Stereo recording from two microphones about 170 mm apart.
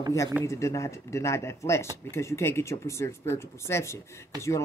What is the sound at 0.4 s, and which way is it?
Speech, 15° left (ahead or behind).